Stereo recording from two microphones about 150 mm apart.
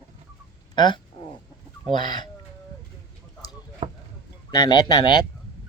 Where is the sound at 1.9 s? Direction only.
30° left (ahead or behind).